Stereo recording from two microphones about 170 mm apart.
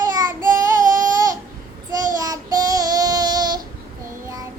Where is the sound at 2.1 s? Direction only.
20° right (ahead or behind).